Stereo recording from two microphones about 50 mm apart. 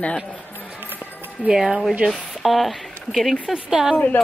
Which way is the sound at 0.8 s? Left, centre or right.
Right.